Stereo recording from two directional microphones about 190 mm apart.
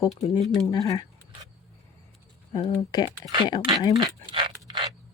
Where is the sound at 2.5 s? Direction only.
20° left (ahead or behind).